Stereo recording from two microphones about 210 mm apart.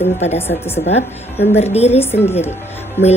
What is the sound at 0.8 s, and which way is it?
Speech, 30° left (ahead or behind).